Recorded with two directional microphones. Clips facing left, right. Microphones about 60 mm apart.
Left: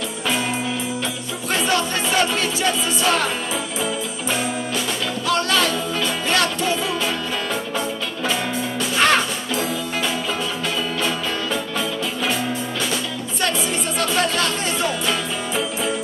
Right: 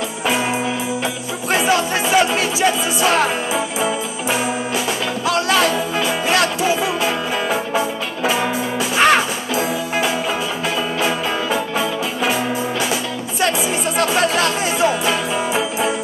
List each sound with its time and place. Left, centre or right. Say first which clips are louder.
0.2 s music: right 4 dB; centre